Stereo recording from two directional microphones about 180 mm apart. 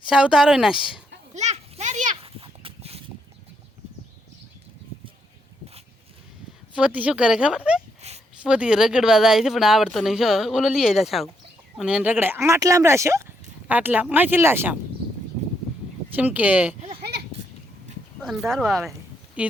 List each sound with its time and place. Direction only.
0.1 s speech: 5° right (ahead or behind)
1.3 s children playing: 40° right (ahead or behind)
2.2 s a sound: 30° right (ahead or behind)
6.7 s speech: 5° right (ahead or behind)
8.0 s a sound: 35° right (ahead or behind)
8.4 s speech: 5° right (ahead or behind)
16.1 s speech: 10° right (ahead or behind)
17.0 s a sound: 65° right (ahead or behind)
18.2 s speech: centre (ahead or behind)